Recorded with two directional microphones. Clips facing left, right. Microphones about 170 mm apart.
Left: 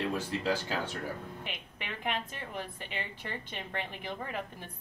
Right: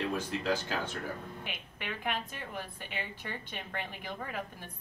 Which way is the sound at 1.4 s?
Centre (ahead or behind).